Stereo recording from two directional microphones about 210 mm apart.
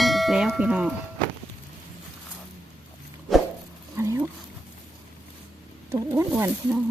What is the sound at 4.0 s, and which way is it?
Roaring cats, 15° right (ahead or behind).